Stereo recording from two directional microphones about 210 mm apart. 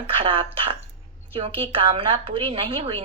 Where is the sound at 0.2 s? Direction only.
25° right (ahead or behind).